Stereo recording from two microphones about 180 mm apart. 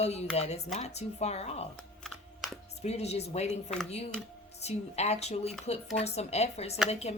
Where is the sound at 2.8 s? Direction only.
35° left (ahead or behind).